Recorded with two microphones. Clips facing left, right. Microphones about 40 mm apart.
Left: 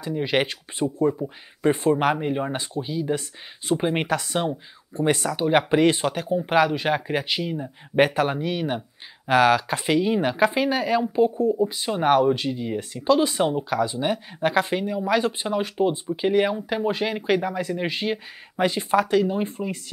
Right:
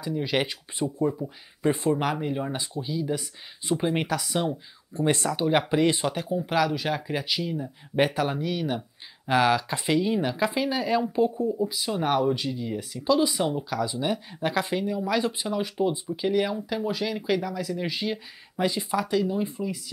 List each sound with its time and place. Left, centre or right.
0.0 s speech: left
1.7 s speech: left
5.3 s speech: centre
5.7 s speech: left
10.2 s speech: left
15.2 s speech: left